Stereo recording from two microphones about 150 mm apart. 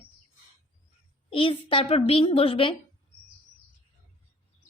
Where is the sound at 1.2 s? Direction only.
35° left (ahead or behind).